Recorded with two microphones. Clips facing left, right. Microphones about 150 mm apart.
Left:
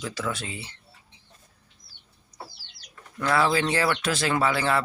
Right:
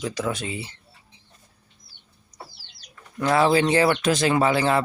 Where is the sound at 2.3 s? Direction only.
20° right (ahead or behind).